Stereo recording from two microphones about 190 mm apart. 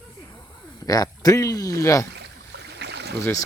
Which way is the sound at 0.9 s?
20° left (ahead or behind).